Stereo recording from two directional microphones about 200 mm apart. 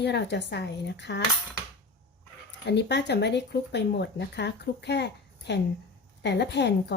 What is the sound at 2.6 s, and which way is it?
Speech, 60° left (ahead or behind).